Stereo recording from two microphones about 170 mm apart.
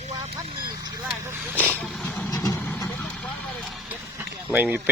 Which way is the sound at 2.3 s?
20° left (ahead or behind).